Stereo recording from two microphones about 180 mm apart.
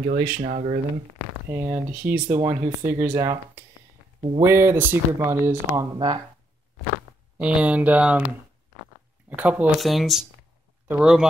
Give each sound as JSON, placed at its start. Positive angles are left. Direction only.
{"t": 0.0, "sound": "speech", "side_deg": -50}
{"t": 1.5, "sound": "speech", "side_deg": -15}
{"t": 5.9, "sound": "speech", "side_deg": -25}
{"t": 7.3, "sound": "speech", "side_deg": -5}
{"t": 9.3, "sound": "speech", "side_deg": -10}